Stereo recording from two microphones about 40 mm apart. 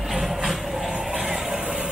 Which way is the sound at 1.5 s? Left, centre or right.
Right.